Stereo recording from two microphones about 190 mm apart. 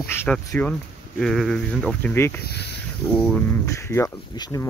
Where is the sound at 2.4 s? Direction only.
60° left (ahead or behind).